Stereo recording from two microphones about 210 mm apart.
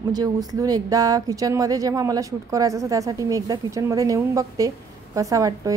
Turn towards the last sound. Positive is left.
turn(degrees=-15)  # may be behind; listen again after turning